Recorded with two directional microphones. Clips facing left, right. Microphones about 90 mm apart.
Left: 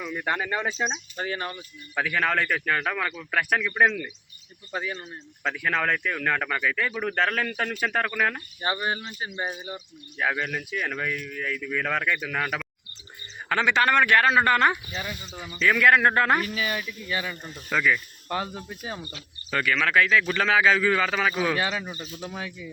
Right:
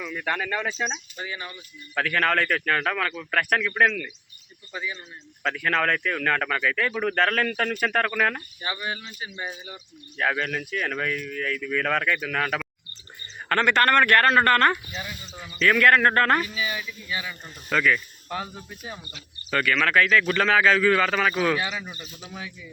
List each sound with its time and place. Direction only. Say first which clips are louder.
0.0 s speech: even; 15° left (ahead or behind)
1.1 s speech: left 4 dB; 40° left (ahead or behind)
2.0 s speech: right 2 dB; 5° left (ahead or behind)
4.7 s speech: left 2 dB; 45° left (ahead or behind)
5.4 s speech: right 2 dB; 5° left (ahead or behind)
8.6 s speech: left 4 dB; 35° left (ahead or behind)
10.2 s speech: right 1 dB; 5° left (ahead or behind)
16.6 s speech: left 1 dB; 45° left (ahead or behind)
17.7 s speech: right 1 dB; 5° left (ahead or behind)
21.8 s speech: left 4 dB; 25° left (ahead or behind)